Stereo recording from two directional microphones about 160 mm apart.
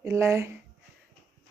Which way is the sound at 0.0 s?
15° right (ahead or behind).